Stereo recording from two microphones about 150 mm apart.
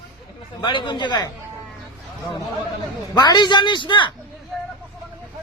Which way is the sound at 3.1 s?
30° left (ahead or behind).